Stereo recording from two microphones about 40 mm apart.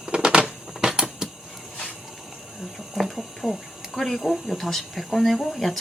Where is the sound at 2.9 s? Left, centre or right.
Centre.